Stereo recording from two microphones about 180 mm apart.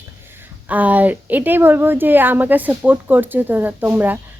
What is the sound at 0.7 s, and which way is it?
Speech, 10° right (ahead or behind).